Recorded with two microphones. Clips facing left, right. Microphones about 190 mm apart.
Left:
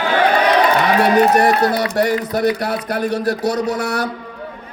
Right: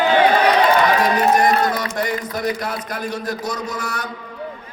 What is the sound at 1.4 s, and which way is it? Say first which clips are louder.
Speech: left 3 dB; 35° left (ahead or behind).